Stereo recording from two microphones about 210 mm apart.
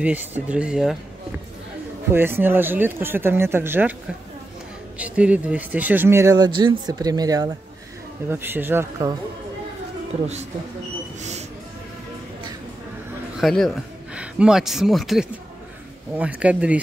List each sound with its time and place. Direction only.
0.0 s speech: 5° right (ahead or behind)
2.1 s speech: 10° right (ahead or behind)
4.9 s speech: 5° right (ahead or behind)
11.1 s a sound: 30° right (ahead or behind)
13.4 s speech: centre (ahead or behind)